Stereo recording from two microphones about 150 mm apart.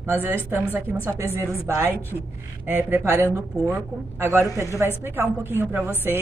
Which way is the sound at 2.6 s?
15° right (ahead or behind).